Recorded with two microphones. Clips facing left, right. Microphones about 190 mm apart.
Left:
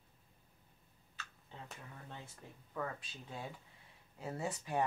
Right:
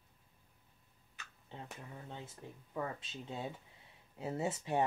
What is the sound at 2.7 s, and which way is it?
Speech, 20° right (ahead or behind).